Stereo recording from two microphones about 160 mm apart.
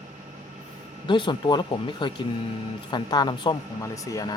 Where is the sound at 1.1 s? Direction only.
30° left (ahead or behind).